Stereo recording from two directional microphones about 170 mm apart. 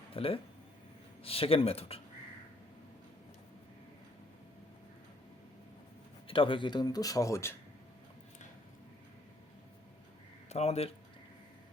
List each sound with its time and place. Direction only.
0.1 s speech: 35° left (ahead or behind)
6.2 s speech: 30° left (ahead or behind)
10.5 s speech: 40° left (ahead or behind)